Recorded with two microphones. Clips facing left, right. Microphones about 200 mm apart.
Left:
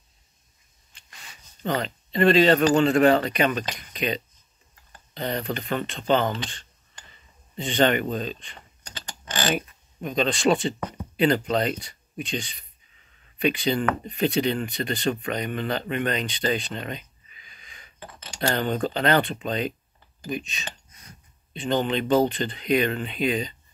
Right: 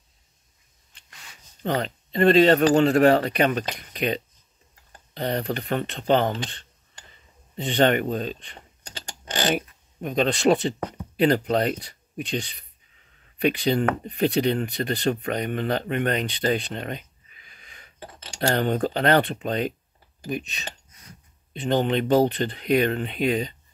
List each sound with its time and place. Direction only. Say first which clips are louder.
1.6 s speech: right 1 dB; 50° right (ahead or behind)
6.3 s speech: right 1 dB; 45° right (ahead or behind)
7.5 s speech: right 1 dB; 60° right (ahead or behind)
9.2 s mechanisms: right 2 dB; 25° right (ahead or behind)
10.0 s speech: right 2 dB; 55° right (ahead or behind)
16.5 s a sound: right 1 dB; 55° right (ahead or behind)
17.9 s a sound: right 1 dB; 40° right (ahead or behind)
18.5 s speech: right 2 dB; 60° right (ahead or behind)